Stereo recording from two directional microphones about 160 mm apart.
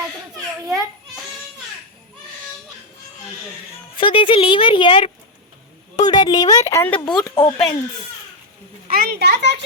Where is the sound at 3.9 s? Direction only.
30° left (ahead or behind); by 7.0 s 15° left (ahead or behind).